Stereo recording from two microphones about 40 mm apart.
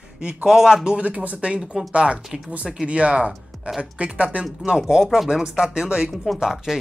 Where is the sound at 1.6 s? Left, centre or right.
Centre.